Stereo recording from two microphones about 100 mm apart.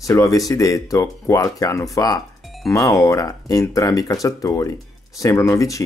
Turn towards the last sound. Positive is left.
turn(degrees=35)  # may be behind; listen again after turning